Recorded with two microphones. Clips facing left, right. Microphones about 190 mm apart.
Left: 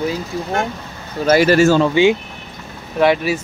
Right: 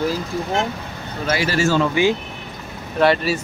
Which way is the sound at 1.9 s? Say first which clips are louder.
Left 4 dB; 20° left (ahead or behind).